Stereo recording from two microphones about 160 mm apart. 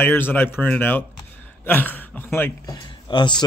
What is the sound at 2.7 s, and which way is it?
Speech, 25° left (ahead or behind).